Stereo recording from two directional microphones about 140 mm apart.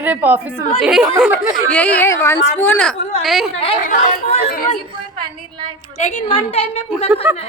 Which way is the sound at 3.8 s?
70° left (ahead or behind).